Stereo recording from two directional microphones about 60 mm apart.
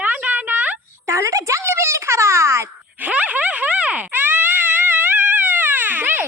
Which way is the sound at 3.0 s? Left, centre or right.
Right.